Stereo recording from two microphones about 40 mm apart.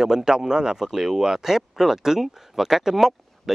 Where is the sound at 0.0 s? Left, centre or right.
Centre.